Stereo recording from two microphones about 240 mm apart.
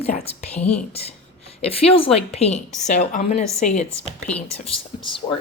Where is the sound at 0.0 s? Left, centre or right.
Left.